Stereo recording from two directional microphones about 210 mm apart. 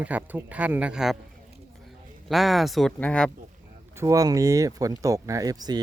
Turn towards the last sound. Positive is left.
turn(degrees=-20)  # may be behind; listen again after turning